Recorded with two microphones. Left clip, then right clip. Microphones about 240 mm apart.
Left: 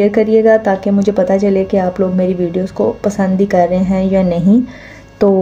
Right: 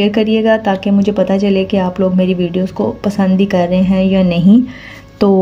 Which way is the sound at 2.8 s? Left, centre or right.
Right.